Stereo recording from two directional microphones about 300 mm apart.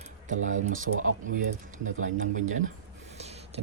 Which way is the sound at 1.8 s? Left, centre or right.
Right.